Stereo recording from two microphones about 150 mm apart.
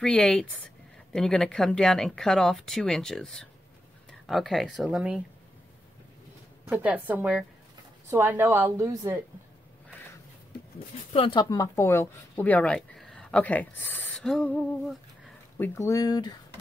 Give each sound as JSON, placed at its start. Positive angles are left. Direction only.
{"t": 0.0, "sound": "speech", "side_deg": 5}
{"t": 6.7, "sound": "speech", "side_deg": -10}
{"t": 11.1, "sound": "speech", "side_deg": 35}
{"t": 11.5, "sound": "speech", "side_deg": 20}